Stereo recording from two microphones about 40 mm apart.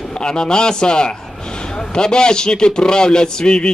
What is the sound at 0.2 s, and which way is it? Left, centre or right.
A man's voice, centre.